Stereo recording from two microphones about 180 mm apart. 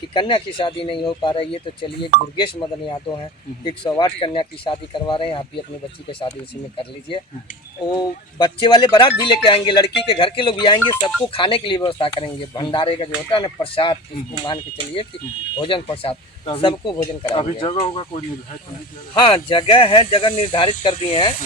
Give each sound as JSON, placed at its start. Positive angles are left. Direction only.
{"t": 0.1, "sound": "speech", "side_deg": 25}
{"t": 7.9, "sound": "speech", "side_deg": 25}
{"t": 19.2, "sound": "speech", "side_deg": 25}